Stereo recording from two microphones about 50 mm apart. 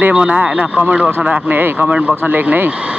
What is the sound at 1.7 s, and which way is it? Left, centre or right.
Speech, right.